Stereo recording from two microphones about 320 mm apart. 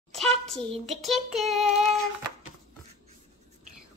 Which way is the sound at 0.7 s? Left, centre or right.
Centre.